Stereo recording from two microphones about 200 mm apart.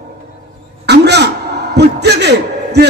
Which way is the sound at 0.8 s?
55° right (ahead or behind).